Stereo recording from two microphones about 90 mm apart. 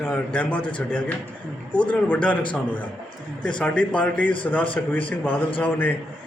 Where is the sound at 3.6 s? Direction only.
15° left (ahead or behind).